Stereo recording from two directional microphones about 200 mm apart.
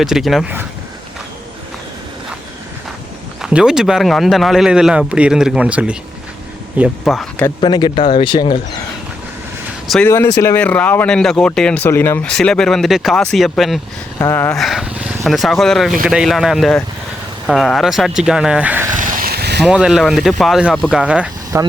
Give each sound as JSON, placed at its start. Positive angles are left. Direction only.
{"t": 0.0, "sound": "speech", "side_deg": 0}
{"t": 3.4, "sound": "speech", "side_deg": -5}
{"t": 7.6, "sound": "speech", "side_deg": 20}
{"t": 9.8, "sound": "speech", "side_deg": 0}
{"t": 14.2, "sound": "speech", "side_deg": 10}
{"t": 18.9, "sound": "a sound", "side_deg": -45}
{"t": 19.6, "sound": "speech", "side_deg": -5}